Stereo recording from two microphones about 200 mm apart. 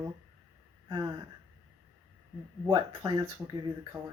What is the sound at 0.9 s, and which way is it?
Speech, 20° right (ahead or behind).